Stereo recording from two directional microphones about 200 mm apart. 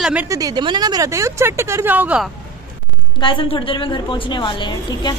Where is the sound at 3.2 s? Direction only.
25° left (ahead or behind).